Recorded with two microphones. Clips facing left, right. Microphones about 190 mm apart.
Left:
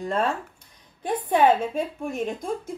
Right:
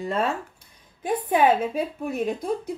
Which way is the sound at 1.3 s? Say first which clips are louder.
Left 1 dB; 5° right (ahead or behind).